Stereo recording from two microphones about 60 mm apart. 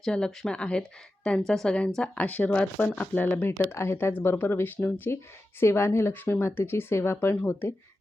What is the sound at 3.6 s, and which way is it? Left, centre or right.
Speech, left.